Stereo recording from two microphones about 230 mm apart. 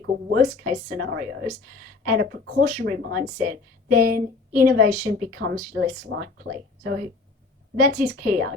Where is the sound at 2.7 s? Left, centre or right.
Right.